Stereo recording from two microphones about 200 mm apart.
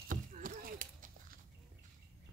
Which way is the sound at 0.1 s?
45° right (ahead or behind).